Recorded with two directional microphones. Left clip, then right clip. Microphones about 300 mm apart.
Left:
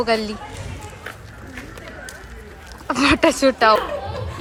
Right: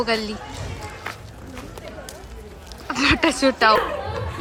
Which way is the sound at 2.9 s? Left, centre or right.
Centre.